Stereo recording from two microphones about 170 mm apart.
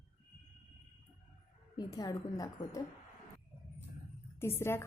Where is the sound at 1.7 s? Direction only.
20° left (ahead or behind).